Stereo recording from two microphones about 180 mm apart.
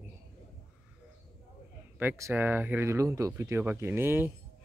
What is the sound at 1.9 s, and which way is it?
Speech, 15° right (ahead or behind).